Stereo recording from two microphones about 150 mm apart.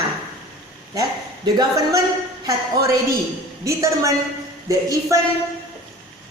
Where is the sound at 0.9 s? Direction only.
25° right (ahead or behind).